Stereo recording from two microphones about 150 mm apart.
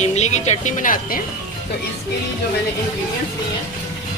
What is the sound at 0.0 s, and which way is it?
Speech, 50° left (ahead or behind).